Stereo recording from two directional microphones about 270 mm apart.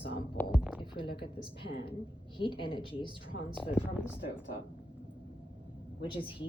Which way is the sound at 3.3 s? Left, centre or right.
Left.